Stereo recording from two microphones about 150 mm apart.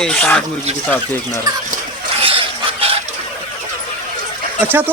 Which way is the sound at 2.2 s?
35° right (ahead or behind).